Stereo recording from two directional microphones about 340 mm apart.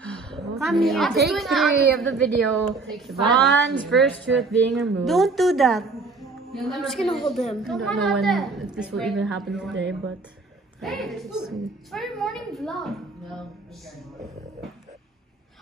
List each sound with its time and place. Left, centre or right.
0.0 s a sound: centre
1.2 s a woman's voice: centre
9.8 s speech: right
10.8 s a woman's voice: centre